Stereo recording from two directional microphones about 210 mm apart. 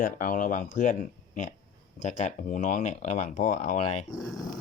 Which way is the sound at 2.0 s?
35° left (ahead or behind).